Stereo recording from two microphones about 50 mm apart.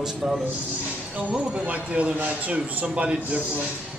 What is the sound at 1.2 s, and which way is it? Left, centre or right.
A man's voice, right.